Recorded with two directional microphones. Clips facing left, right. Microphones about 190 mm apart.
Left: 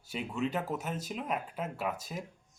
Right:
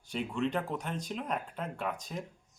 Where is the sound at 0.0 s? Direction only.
5° left (ahead or behind).